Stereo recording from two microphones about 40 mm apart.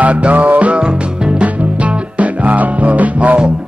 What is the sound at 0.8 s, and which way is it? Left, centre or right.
Music, right.